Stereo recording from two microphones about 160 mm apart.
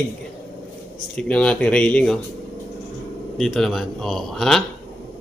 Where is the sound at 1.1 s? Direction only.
5° left (ahead or behind).